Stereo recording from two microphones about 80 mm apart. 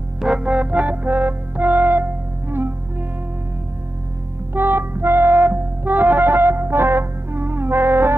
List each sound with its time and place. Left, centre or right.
0.2 s music: centre
4.6 s music: right